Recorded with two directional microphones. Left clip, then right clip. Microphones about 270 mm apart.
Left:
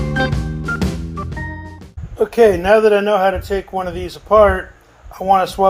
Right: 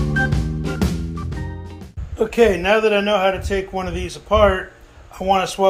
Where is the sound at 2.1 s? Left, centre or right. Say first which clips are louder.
Left 4 dB; left.